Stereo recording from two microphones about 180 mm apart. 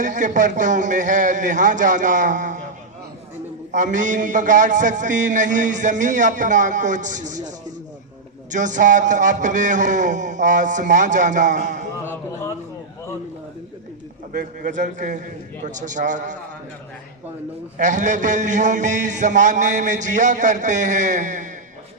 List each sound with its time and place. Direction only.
0.0 s a man's voice: 45° right (ahead or behind)
3.7 s a man's voice: 45° right (ahead or behind)
12.0 s a sound: 10° left (ahead or behind)
14.3 s a man's voice: 45° right (ahead or behind)
17.7 s a man's voice: 45° right (ahead or behind)